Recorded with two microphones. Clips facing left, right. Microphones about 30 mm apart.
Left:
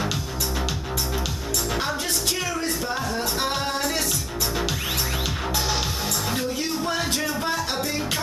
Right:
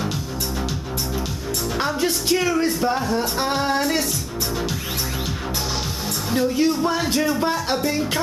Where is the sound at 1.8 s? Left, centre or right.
Centre.